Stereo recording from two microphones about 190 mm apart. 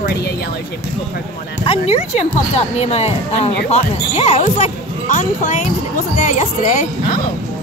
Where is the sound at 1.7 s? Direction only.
35° left (ahead or behind).